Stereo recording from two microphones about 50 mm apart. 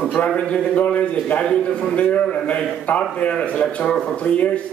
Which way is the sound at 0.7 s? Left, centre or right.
Left.